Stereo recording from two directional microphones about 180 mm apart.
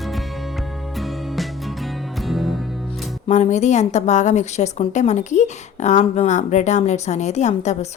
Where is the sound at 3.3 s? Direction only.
40° left (ahead or behind).